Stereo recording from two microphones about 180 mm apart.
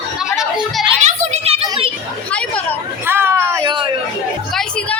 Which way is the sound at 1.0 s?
40° right (ahead or behind).